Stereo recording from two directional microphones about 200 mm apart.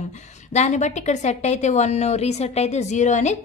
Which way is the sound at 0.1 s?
35° left (ahead or behind).